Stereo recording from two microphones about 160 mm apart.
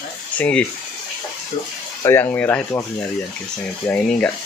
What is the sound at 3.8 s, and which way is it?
Speech, 10° left (ahead or behind).